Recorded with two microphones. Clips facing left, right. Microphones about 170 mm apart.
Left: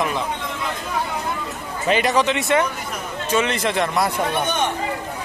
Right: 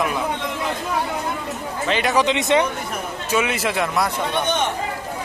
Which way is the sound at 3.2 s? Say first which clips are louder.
Left 1 dB; 10° right (ahead or behind).